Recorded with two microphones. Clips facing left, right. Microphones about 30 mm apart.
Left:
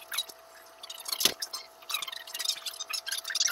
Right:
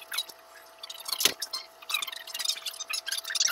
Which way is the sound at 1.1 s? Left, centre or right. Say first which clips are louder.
Right 1 dB; right.